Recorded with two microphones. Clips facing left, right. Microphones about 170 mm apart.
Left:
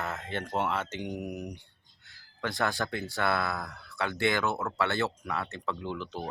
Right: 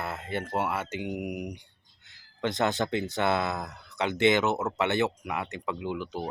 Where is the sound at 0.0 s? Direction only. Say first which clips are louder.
Right 2 dB; 10° right (ahead or behind).